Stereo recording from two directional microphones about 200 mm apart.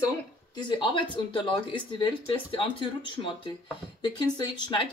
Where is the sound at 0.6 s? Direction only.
25° left (ahead or behind).